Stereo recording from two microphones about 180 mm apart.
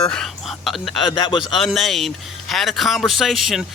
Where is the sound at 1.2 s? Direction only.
25° left (ahead or behind).